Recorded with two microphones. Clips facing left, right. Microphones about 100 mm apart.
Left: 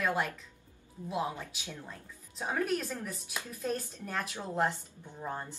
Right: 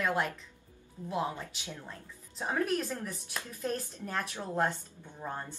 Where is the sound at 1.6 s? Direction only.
20° right (ahead or behind).